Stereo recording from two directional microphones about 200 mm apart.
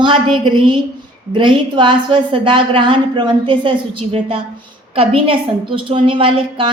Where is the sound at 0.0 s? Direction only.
25° right (ahead or behind).